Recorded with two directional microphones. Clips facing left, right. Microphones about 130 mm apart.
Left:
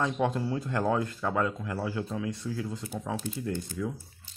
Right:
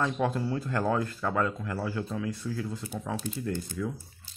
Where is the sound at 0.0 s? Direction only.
20° left (ahead or behind).